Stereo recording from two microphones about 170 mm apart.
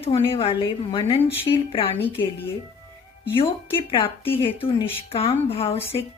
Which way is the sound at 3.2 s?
30° left (ahead or behind).